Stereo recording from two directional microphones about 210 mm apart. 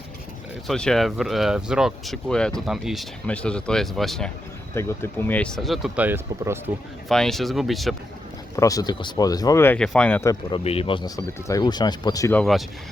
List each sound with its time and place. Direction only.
0.7 s speech: centre (ahead or behind)
4.7 s speech: 10° left (ahead or behind); by 6.6 s 10° right (ahead or behind)
7.1 s speech: centre (ahead or behind)
8.5 s speech: 15° left (ahead or behind)
10.5 s speech: 30° left (ahead or behind)
12.4 s speech: centre (ahead or behind)